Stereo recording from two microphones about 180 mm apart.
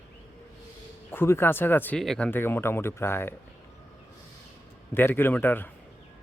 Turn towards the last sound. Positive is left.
turn(degrees=10)  # may be behind; listen again after turning